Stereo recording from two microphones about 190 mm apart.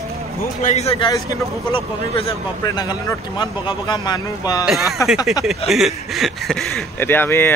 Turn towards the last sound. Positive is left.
turn(degrees=10)  # may be behind; listen again after turning